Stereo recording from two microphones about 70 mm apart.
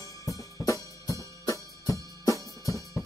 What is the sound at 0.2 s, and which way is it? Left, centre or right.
Music, left.